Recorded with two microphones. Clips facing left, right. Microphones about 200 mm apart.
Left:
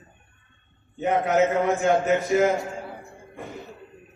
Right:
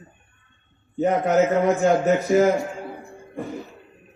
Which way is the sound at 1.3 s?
40° right (ahead or behind).